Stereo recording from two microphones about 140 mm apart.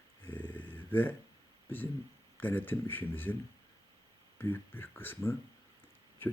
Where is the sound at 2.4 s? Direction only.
15° left (ahead or behind).